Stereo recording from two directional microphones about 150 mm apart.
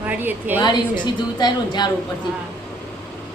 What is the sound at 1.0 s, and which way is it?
Speech, 30° left (ahead or behind).